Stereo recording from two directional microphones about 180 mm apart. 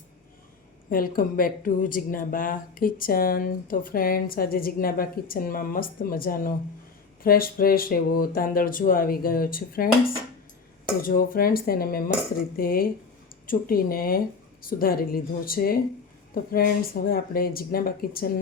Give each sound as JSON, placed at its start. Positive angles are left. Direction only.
{"t": 0.9, "sound": "speech", "side_deg": 55}
{"t": 11.0, "sound": "speech", "side_deg": 55}